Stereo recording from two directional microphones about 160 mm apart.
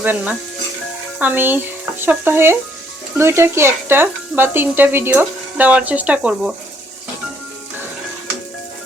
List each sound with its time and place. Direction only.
0.0 s stir: 10° right (ahead or behind)